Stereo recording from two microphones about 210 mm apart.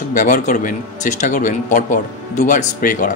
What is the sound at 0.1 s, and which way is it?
A man's voice, 40° left (ahead or behind).